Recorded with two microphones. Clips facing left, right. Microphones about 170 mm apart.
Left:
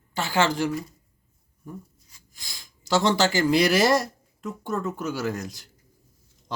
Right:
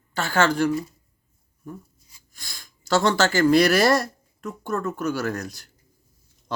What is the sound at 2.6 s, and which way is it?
A man's voice, 20° left (ahead or behind).